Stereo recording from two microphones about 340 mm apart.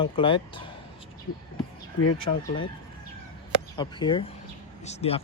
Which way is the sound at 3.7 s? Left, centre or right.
Centre.